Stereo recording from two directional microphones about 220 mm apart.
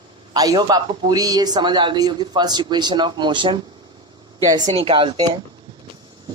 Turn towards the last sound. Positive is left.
turn(degrees=-20)  # may be behind; listen again after turning